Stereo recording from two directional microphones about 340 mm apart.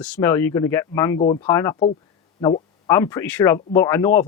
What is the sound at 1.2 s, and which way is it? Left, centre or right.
Speech, centre.